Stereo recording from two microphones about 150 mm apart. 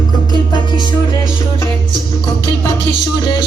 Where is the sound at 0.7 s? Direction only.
30° left (ahead or behind).